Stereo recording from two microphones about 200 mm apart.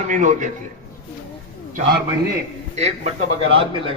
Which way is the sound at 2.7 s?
30° right (ahead or behind).